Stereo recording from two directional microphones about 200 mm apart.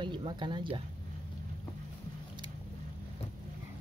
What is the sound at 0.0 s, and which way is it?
Speech, 25° right (ahead or behind).